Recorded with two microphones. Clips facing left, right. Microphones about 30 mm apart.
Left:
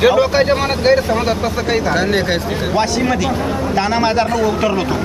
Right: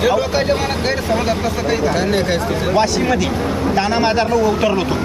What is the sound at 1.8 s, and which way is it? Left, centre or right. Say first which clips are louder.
Speech: left 1 dB; centre.